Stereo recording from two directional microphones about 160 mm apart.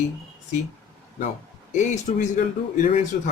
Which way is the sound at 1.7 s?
50° left (ahead or behind).